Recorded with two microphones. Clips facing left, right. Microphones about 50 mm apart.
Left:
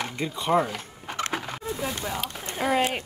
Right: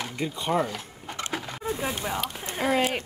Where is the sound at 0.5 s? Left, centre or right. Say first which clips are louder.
Left 3 dB; centre.